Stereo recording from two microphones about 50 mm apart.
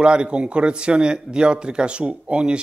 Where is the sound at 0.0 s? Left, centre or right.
Centre.